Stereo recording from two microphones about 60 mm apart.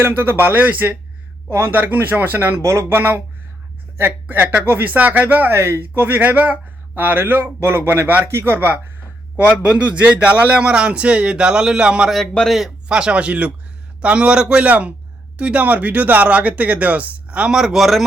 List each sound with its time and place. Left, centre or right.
0.2 s speech: right
1.5 s speech: right
1.7 s speech: right
2.6 s speech: right
2.9 s speech: right
4.3 s speech: right
4.9 s speech: right
5.5 s speech: right
9.7 s a man's voice: right
12.5 s a man's voice: centre
12.9 s speech: centre
17.5 s a man's voice: centre